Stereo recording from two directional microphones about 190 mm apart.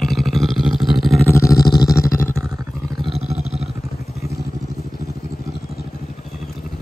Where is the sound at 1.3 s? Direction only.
15° left (ahead or behind).